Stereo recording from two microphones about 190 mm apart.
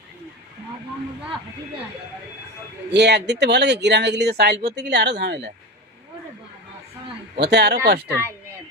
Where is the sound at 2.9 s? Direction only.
65° right (ahead or behind).